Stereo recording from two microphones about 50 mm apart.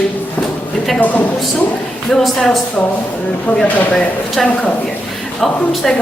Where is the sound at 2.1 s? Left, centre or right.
Centre.